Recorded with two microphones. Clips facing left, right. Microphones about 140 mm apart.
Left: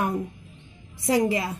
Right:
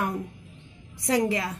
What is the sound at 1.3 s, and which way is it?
Speech, 25° left (ahead or behind).